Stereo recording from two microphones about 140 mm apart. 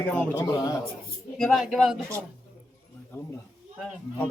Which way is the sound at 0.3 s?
25° left (ahead or behind).